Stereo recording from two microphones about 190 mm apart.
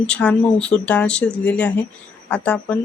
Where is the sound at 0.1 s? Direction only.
5° left (ahead or behind).